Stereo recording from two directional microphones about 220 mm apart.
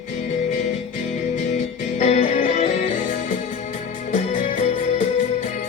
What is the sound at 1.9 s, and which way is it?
Music, 35° left (ahead or behind).